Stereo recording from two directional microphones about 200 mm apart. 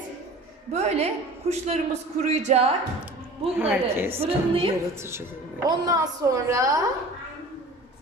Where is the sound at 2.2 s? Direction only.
35° right (ahead or behind).